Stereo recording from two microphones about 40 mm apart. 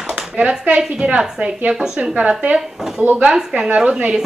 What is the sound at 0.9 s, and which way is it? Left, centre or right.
A woman's voice, right.